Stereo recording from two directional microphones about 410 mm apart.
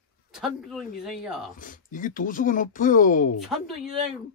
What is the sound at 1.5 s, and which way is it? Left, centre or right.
Speech, centre.